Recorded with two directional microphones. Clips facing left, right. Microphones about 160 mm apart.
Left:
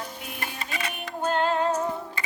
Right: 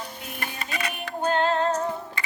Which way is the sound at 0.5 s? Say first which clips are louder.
Right 3 dB; 25° left (ahead or behind).